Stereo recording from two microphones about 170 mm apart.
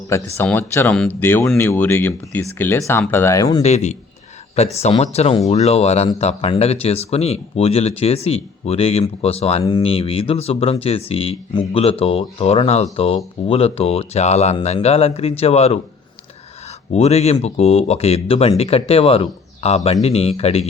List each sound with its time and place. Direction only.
0.3 s speech: 15° left (ahead or behind)
3.6 s speech: 40° left (ahead or behind)
16.9 s speech: 40° left (ahead or behind)